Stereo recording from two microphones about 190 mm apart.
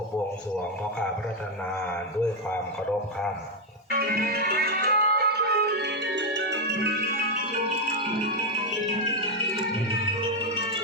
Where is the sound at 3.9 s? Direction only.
50° right (ahead or behind).